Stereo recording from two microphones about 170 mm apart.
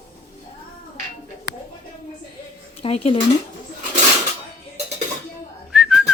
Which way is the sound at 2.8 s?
35° left (ahead or behind).